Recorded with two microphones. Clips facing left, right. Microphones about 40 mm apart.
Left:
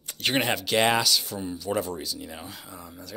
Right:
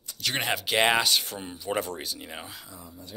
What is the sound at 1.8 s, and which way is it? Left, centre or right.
Speech, right.